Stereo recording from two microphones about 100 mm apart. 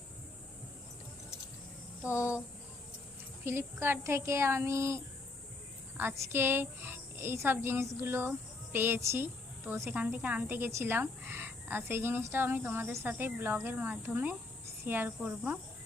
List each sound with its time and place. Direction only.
2.0 s a sound: 30° left (ahead or behind)
3.4 s a woman's voice: 25° right (ahead or behind)
10.0 s cricket: 15° right (ahead or behind)
10.4 s a woman's voice: 25° right (ahead or behind)
14.8 s cricket: 20° right (ahead or behind)